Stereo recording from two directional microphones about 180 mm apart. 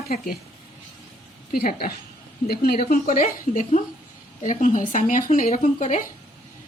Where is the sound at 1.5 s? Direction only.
55° left (ahead or behind).